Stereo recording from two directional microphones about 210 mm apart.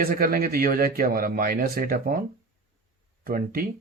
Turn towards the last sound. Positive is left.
turn(degrees=-45)  # may be behind; listen again after turning